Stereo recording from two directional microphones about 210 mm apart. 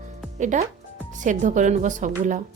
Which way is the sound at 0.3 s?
35° right (ahead or behind).